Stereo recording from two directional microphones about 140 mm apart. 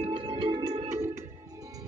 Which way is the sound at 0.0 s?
40° right (ahead or behind).